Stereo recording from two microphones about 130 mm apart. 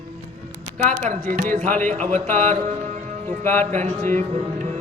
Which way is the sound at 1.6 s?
15° left (ahead or behind).